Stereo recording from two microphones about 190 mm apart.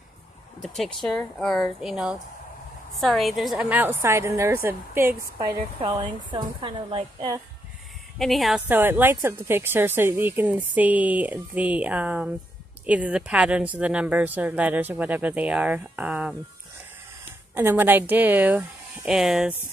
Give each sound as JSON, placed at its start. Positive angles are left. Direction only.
{"t": 0.6, "sound": "a woman's voice", "side_deg": 0}
{"t": 5.8, "sound": "speech", "side_deg": -25}
{"t": 8.2, "sound": "a woman's voice", "side_deg": 0}
{"t": 17.6, "sound": "a woman's voice", "side_deg": -10}